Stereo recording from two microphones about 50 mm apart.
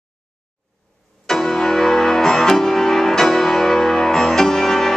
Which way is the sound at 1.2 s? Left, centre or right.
Centre.